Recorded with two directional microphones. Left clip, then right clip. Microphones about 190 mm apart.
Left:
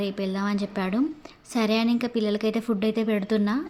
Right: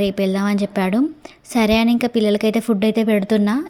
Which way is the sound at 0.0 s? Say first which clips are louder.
Right 9 dB; 35° right (ahead or behind).